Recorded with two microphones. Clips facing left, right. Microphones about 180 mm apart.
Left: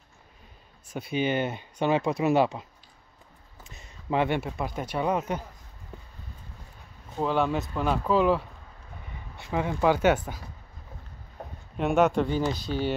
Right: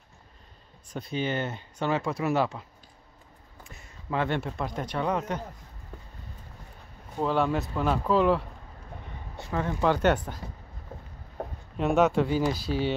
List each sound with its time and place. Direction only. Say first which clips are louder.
0.8 s speech: left 3 dB; 5° left (ahead or behind)
3.6 s speech: left 3 dB; 20° left (ahead or behind)
7.2 s speech: even; centre (ahead or behind)
9.5 s speech: left 2 dB; 15° left (ahead or behind)
11.7 s speech: even; centre (ahead or behind)